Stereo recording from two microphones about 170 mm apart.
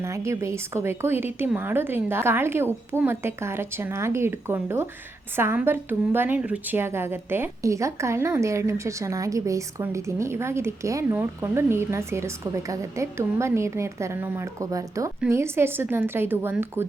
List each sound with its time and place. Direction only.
0.0 s a woman's voice: 15° right (ahead or behind)